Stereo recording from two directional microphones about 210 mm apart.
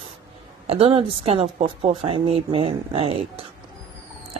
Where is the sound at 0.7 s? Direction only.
25° right (ahead or behind).